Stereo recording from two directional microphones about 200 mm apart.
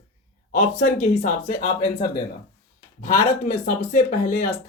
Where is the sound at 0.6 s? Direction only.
40° left (ahead or behind).